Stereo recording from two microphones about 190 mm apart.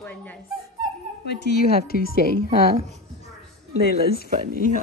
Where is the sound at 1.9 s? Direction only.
55° left (ahead or behind).